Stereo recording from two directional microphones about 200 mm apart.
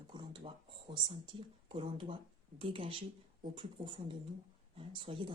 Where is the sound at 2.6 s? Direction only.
25° right (ahead or behind).